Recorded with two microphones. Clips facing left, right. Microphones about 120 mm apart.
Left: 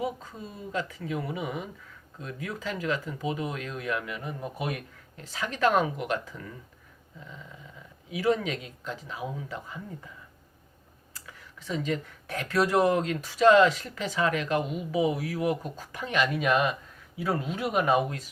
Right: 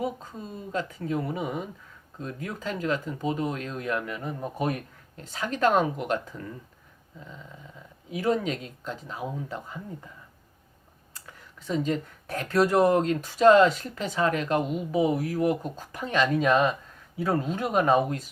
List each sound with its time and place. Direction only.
0.0 s speech: 40° right (ahead or behind)
8.1 s speech: 40° right (ahead or behind)
11.3 s speech: 40° right (ahead or behind)